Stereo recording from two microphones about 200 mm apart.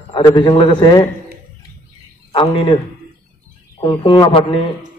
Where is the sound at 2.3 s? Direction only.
25° left (ahead or behind).